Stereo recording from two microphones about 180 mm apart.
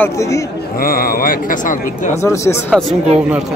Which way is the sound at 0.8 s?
55° left (ahead or behind).